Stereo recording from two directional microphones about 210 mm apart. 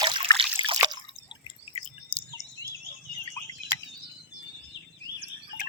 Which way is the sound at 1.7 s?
30° left (ahead or behind).